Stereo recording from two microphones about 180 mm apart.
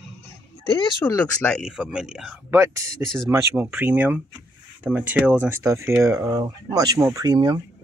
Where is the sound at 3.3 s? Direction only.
15° right (ahead or behind).